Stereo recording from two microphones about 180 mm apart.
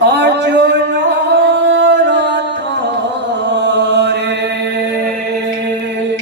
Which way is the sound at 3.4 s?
75° right (ahead or behind).